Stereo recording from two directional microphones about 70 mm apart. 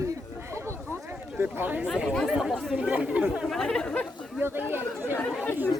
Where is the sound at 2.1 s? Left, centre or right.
Centre.